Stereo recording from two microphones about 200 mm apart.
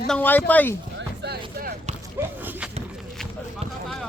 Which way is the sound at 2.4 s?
5° right (ahead or behind).